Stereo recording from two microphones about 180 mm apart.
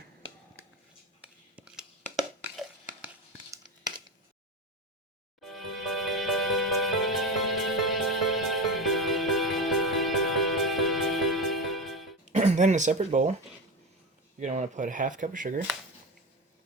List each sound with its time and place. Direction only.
1.5 s a sound: 5° right (ahead or behind)
5.4 s music: centre (ahead or behind)
12.2 s speech: 40° right (ahead or behind)
14.3 s speech: 40° right (ahead or behind)